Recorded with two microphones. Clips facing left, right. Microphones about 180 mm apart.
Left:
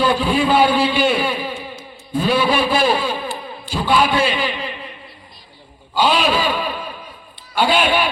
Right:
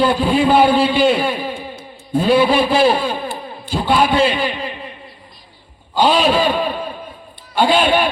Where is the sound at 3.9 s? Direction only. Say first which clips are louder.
Right 2 dB; 20° right (ahead or behind).